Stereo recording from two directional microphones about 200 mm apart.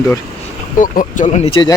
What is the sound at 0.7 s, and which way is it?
Speech, 40° left (ahead or behind).